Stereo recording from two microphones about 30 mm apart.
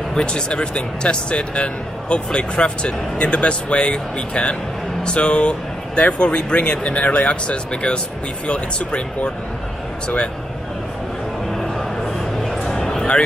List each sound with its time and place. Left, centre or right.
0.1 s speech: left
7.5 s speech: left
11.5 s music: centre
12.6 s a sound: centre